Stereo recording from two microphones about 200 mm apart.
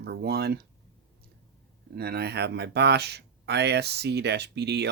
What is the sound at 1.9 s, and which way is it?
Speech, 50° right (ahead or behind).